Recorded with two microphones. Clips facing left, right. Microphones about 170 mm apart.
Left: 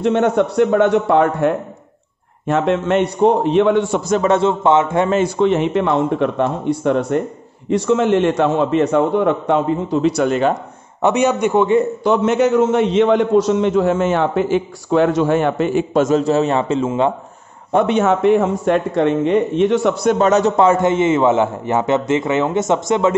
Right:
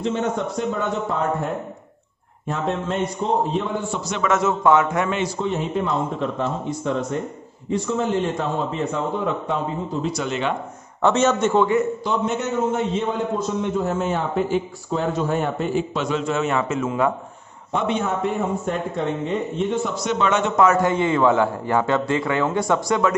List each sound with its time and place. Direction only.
0.0 s a man's voice: 65° left (ahead or behind)
4.1 s a man's voice: 35° left (ahead or behind)
5.4 s a man's voice: 80° left
7.7 s a man's voice: 75° left (ahead or behind)
10.2 s speech: 45° left (ahead or behind)
11.0 s a man's voice: 15° left (ahead or behind)
12.0 s a man's voice: 75° left (ahead or behind)
15.9 s a man's voice: 45° left (ahead or behind); by 17.1 s 25° left (ahead or behind)
17.7 s a man's voice: 65° left (ahead or behind); by 23.1 s 20° left (ahead or behind)